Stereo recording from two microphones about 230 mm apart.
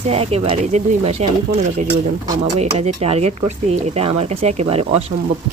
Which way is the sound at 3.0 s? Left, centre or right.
Right.